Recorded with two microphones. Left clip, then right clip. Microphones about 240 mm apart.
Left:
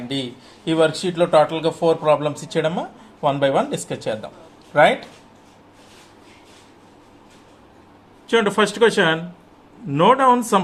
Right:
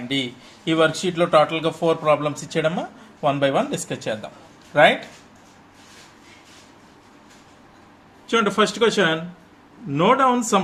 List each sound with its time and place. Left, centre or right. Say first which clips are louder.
0.1 s a man's voice: right 3 dB; centre
8.3 s speech: left 2 dB; centre